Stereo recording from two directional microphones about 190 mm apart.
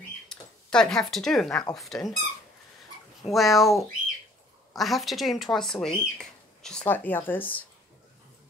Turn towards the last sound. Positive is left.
turn(degrees=10)  # may be behind; listen again after turning